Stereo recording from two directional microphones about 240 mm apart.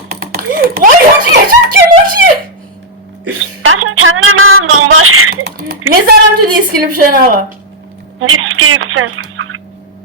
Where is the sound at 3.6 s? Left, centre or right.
Right.